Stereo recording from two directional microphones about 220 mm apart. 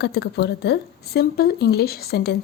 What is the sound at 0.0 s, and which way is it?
Speech, 45° left (ahead or behind).